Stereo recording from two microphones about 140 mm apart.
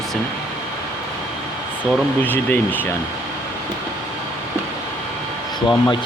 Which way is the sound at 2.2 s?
15° left (ahead or behind).